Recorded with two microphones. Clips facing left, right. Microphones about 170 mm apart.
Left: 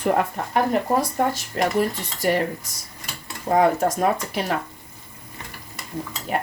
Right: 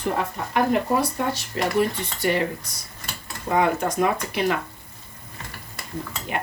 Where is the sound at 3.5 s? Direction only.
40° left (ahead or behind).